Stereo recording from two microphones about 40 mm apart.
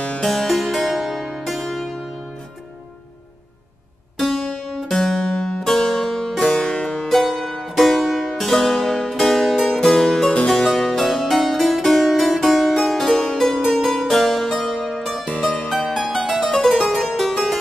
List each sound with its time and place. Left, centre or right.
0.2 s music: centre
4.2 s harpsichord: centre
4.6 s music: centre
4.9 s music: centre
6.4 s music: left
7.1 s music: centre
9.8 s music: centre
10.4 s harpsichord: centre
13.7 s music: centre
16.7 s harpsichord: centre